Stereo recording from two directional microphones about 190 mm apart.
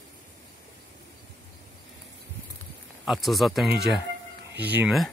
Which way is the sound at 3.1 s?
Centre (ahead or behind).